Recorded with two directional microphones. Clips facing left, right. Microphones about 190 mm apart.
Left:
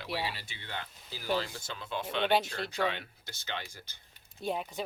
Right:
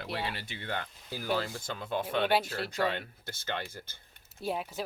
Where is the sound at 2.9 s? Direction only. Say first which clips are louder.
Right 5 dB; 50° right (ahead or behind).